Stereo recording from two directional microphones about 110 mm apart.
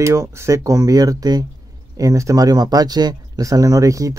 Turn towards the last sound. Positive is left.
turn(degrees=-30)  # may be behind; listen again after turning